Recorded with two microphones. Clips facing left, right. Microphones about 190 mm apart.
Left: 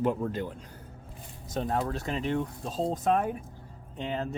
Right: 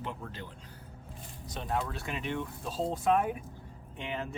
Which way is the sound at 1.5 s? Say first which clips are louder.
Left 5 dB; 40° left (ahead or behind).